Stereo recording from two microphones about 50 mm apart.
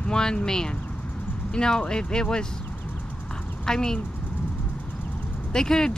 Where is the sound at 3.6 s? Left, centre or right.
Centre.